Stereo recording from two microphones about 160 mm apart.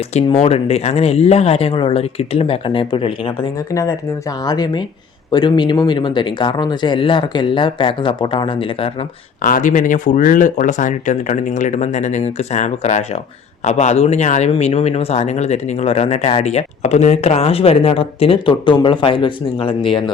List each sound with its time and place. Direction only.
0.3 s speech: 40° left (ahead or behind)
4.4 s speech: 25° left (ahead or behind)
9.4 s speech: 55° left (ahead or behind); by 20.1 s 35° left (ahead or behind)